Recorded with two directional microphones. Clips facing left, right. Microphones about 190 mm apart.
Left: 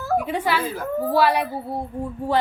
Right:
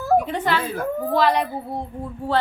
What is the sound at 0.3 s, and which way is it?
A woman's voice, 10° left (ahead or behind).